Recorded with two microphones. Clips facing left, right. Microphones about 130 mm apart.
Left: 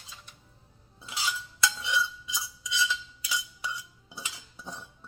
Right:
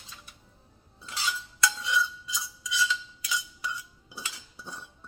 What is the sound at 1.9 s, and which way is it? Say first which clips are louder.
Cutlery: right 1 dB; 25° left (ahead or behind).